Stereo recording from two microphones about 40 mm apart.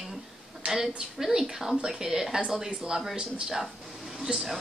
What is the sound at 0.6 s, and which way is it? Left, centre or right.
Speech, right.